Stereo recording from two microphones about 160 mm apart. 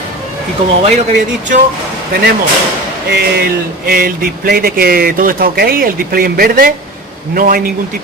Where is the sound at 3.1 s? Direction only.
80° right.